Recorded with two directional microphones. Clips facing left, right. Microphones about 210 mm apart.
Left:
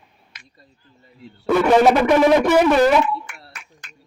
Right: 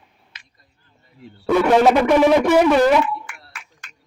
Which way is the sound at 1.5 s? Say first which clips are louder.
Even; centre (ahead or behind).